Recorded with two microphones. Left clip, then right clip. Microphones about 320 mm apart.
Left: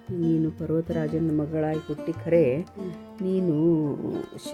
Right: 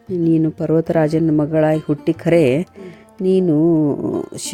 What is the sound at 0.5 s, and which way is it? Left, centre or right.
Speech, right.